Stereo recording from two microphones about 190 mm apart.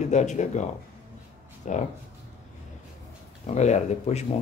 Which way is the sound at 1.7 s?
40° left (ahead or behind).